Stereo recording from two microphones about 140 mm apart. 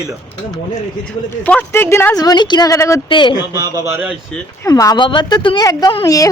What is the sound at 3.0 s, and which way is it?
Speech, 35° left (ahead or behind).